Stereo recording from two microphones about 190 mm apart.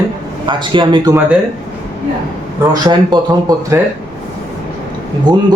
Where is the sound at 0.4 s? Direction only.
25° right (ahead or behind).